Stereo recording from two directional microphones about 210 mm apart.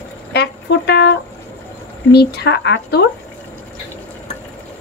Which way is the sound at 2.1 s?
55° left (ahead or behind).